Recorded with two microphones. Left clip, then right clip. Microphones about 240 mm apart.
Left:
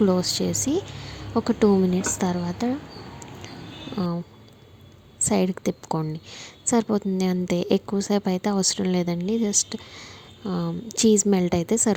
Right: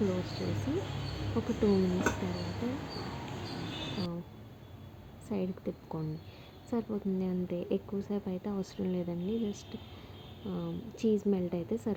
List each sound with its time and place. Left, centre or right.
0.0 s a woman's voice: centre
5.2 s a woman's voice: left